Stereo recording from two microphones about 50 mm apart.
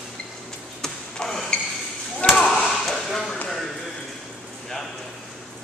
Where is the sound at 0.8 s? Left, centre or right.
Centre.